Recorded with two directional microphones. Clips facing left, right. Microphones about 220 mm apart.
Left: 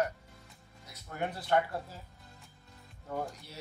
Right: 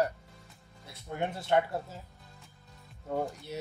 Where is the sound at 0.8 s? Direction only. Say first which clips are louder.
Right 3 dB; 25° right (ahead or behind).